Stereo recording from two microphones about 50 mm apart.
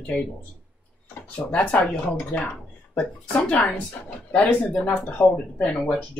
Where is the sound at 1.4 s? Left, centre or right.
Left.